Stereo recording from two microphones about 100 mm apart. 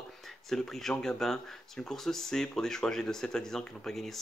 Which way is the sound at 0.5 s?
5° left (ahead or behind).